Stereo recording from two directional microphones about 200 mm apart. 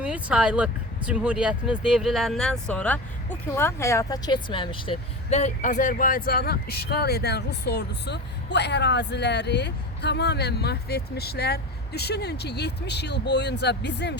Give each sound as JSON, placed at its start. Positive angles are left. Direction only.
{"t": 0.0, "sound": "speech", "side_deg": -5}